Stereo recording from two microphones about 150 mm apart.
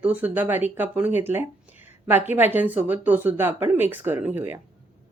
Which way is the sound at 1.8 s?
15° right (ahead or behind).